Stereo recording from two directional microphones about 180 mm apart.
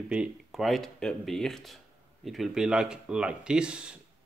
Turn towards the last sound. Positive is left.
turn(degrees=-5)  # may be behind; listen again after turning